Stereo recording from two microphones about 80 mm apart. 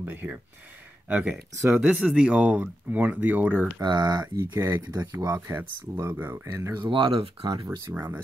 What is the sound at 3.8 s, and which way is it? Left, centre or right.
Speech, right.